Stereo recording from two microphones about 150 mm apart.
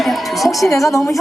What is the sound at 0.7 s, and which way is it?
Speech, 20° left (ahead or behind).